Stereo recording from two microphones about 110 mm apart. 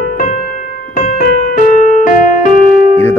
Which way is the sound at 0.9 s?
90° left.